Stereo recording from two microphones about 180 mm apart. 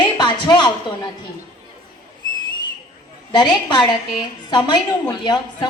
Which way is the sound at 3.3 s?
25° left (ahead or behind).